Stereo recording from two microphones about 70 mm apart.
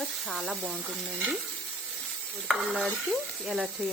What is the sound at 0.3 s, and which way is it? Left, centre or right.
Speech, centre.